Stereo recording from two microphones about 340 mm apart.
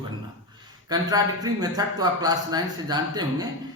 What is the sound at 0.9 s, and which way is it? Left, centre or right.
Speech, centre.